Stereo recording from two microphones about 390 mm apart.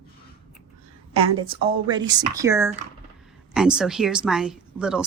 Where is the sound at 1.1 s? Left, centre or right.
Centre.